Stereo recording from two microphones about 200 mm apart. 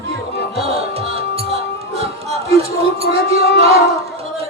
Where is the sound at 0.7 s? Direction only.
30° right (ahead or behind).